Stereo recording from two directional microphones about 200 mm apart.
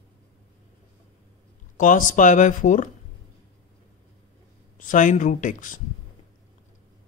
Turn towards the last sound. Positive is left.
turn(degrees=40)  # may be behind; listen again after turning